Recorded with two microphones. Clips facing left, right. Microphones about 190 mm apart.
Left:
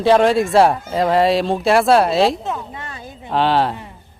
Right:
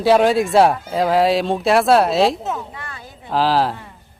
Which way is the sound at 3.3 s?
Centre (ahead or behind).